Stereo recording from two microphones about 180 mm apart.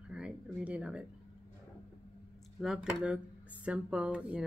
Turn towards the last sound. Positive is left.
turn(degrees=-5)  # may be behind; listen again after turning